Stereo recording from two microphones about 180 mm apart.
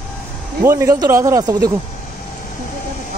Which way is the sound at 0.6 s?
15° right (ahead or behind).